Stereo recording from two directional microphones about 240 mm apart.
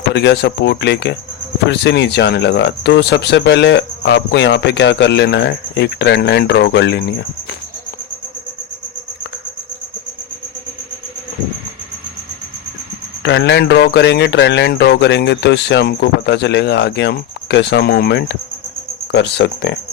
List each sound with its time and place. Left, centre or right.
0.1 s speech: left
13.2 s speech: left